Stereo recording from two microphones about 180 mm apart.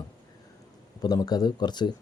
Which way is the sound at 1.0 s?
20° left (ahead or behind).